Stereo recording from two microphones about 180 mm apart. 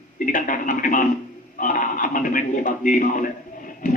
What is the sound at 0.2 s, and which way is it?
A man's voice, 50° left (ahead or behind).